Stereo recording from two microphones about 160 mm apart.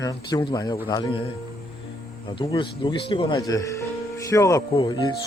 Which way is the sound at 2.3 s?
30° left (ahead or behind).